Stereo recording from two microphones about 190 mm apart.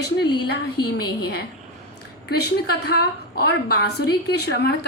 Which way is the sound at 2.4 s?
55° left (ahead or behind).